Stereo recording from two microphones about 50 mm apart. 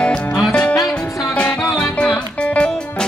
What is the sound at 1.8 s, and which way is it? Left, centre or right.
Music, left.